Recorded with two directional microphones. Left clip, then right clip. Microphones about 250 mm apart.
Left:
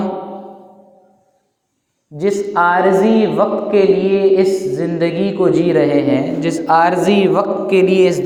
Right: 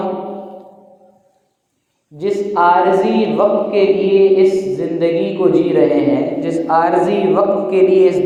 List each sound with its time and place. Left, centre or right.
2.1 s a man's voice: left